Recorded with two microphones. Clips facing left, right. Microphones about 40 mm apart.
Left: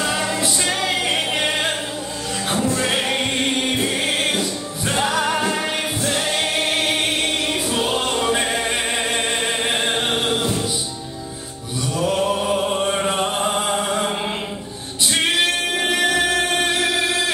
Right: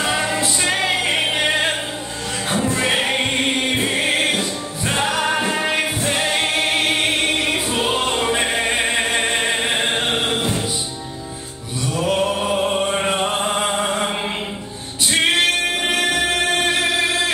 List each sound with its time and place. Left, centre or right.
0.0 s music: right
12.2 s music: centre
13.7 s chant: centre
16.3 s music: right